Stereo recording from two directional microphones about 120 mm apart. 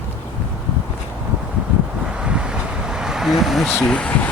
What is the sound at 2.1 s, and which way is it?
Vehicle, 10° right (ahead or behind).